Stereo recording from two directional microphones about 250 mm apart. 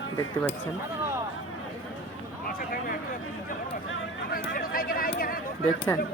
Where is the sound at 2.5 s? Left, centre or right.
Left.